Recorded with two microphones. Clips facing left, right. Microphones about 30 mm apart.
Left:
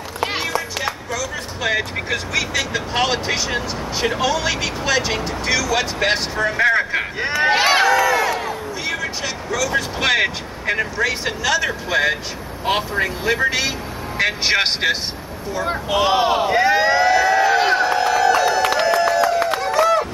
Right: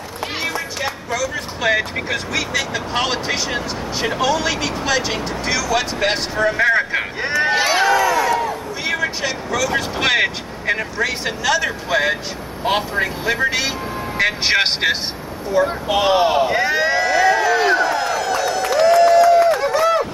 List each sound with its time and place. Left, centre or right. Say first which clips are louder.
0.8 s speech: right 2 dB; centre
7.3 s speech: left 1 dB; centre
8.0 s crowd: right 1 dB; centre
8.8 s speech: right 4 dB; centre
15.6 s speech: right 6 dB; centre
15.9 s speech: even; centre
17.4 s run: even; centre
18.9 s a sound: right 5 dB; left
19.6 s run: even; centre